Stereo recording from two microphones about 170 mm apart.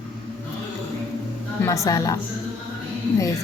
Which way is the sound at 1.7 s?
20° left (ahead or behind).